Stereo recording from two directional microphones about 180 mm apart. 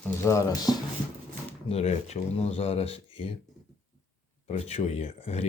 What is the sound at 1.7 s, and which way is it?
Speech, 35° left (ahead or behind).